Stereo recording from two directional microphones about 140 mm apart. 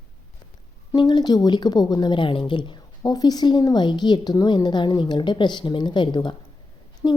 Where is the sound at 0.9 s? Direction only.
30° left (ahead or behind).